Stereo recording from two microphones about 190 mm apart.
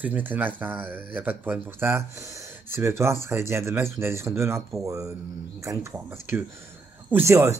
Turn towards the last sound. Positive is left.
turn(degrees=-15)  # may be behind; listen again after turning